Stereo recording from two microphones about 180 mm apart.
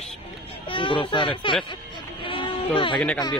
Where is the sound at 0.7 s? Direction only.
30° left (ahead or behind).